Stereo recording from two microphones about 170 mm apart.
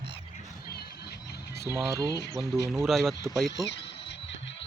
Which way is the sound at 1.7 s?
20° right (ahead or behind).